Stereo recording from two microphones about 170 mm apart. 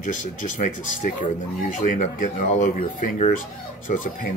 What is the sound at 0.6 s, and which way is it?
Speech, 50° left (ahead or behind).